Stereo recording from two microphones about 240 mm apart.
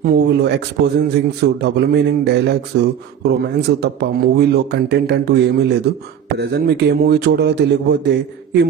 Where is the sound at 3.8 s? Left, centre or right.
Right.